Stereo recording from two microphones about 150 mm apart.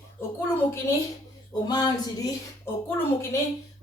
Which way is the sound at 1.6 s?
25° left (ahead or behind).